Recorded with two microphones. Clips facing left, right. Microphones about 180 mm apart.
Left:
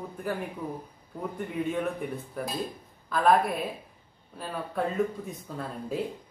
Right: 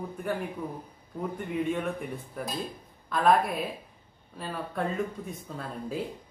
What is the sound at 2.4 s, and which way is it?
A man's voice, centre (ahead or behind).